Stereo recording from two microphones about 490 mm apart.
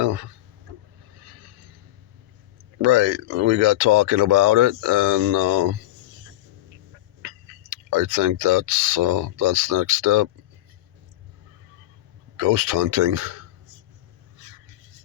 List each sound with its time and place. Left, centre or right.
2.8 s speech: right
7.7 s speech: right
12.4 s speech: right